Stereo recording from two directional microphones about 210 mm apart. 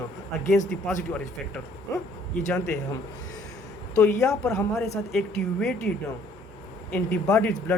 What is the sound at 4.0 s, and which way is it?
Speech, 15° left (ahead or behind).